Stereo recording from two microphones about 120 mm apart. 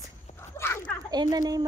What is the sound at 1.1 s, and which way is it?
Speech, 35° right (ahead or behind).